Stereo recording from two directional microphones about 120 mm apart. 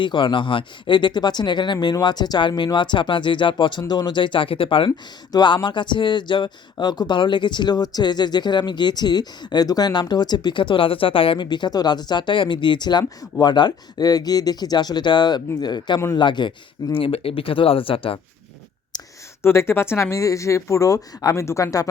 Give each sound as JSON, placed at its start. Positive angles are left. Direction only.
{"t": 0.0, "sound": "speech", "side_deg": 40}
{"t": 4.9, "sound": "speech", "side_deg": 35}
{"t": 17.0, "sound": "speech", "side_deg": 50}
{"t": 18.9, "sound": "a sound", "side_deg": 35}
{"t": 19.4, "sound": "speech", "side_deg": 20}